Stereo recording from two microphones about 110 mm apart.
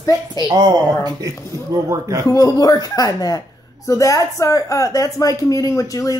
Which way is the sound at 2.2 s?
35° left (ahead or behind).